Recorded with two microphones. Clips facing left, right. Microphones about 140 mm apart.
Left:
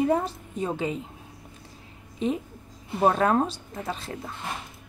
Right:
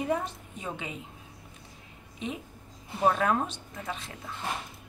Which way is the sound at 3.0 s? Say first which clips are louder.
Left 4 dB; 40° left (ahead or behind).